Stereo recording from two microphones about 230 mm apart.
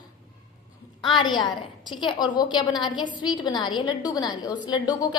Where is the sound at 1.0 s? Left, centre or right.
Centre.